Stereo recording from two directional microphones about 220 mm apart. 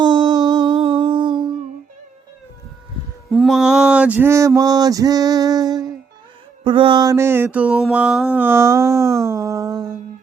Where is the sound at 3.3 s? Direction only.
Centre (ahead or behind).